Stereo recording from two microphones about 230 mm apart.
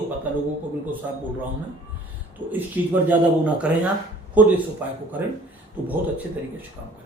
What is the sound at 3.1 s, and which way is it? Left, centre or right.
Speech, centre.